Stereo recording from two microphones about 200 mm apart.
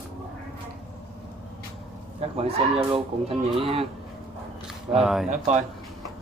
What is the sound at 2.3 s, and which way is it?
Speech, 30° right (ahead or behind).